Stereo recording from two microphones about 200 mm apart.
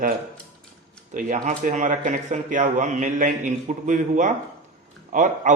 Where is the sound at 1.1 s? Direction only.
40° right (ahead or behind).